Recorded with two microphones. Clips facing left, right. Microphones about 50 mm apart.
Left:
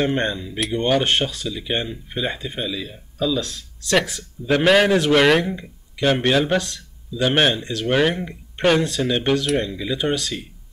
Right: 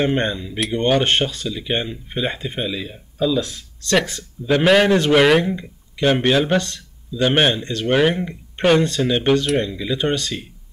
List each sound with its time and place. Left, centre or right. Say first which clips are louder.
0.0 s speech: right 1 dB; centre